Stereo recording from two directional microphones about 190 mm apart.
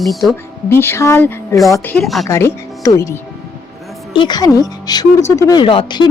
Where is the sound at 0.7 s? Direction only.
10° left (ahead or behind).